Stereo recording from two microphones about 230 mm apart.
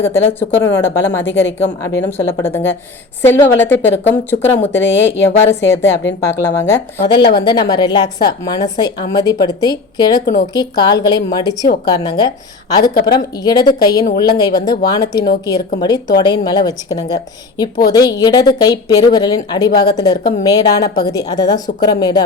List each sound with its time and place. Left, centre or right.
0.0 s a woman's voice: centre